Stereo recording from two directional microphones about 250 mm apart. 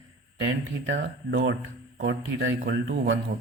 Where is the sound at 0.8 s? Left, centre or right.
Right.